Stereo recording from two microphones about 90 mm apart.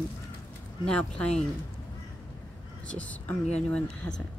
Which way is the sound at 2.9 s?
15° left (ahead or behind).